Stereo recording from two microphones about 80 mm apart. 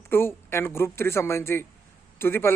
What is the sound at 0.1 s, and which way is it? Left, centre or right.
A man's voice, left.